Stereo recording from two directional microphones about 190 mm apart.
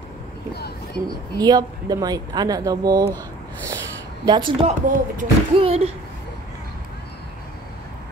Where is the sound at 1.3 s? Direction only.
20° right (ahead or behind).